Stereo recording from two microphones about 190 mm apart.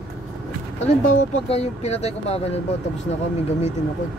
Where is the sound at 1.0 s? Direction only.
35° left (ahead or behind).